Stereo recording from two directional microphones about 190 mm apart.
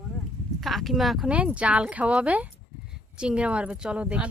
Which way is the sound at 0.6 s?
Centre (ahead or behind).